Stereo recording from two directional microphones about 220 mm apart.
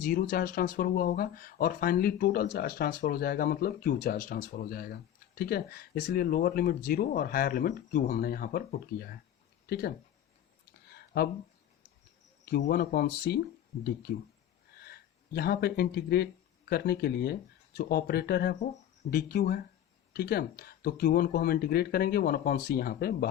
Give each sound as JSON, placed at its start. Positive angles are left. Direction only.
{"t": 0.0, "sound": "speech", "side_deg": 40}
{"t": 10.9, "sound": "a sound", "side_deg": 45}
{"t": 12.5, "sound": "speech", "side_deg": 45}
{"t": 14.8, "sound": "speech", "side_deg": 45}